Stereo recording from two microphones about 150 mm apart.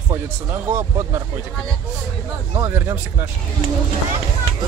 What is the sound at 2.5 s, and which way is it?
Speech, 20° right (ahead or behind).